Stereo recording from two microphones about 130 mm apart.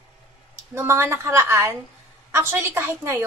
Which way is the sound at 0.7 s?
20° right (ahead or behind).